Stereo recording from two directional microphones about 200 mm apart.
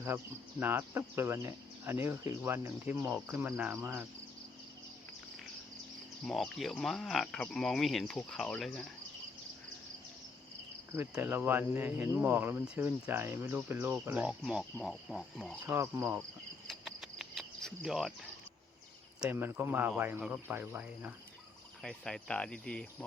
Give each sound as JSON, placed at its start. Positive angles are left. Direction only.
{"t": 0.6, "sound": "speech", "side_deg": -10}
{"t": 6.2, "sound": "speech", "side_deg": 0}
{"t": 10.9, "sound": "speech", "side_deg": -10}
{"t": 15.6, "sound": "speech", "side_deg": -10}
{"t": 16.6, "sound": "cricket", "side_deg": 0}
{"t": 19.2, "sound": "speech", "side_deg": -10}
{"t": 21.8, "sound": "speech", "side_deg": 5}